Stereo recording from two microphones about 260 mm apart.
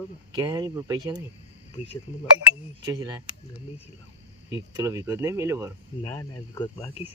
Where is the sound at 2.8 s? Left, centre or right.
Centre.